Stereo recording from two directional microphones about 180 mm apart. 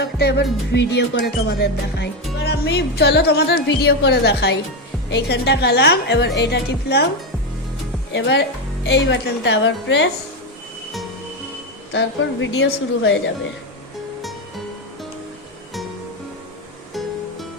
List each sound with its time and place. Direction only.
0.0 s music: 65° left (ahead or behind)
5.0 s a woman's voice: 75° left (ahead or behind)
8.1 s speech: 80° left
11.9 s speech: 85° left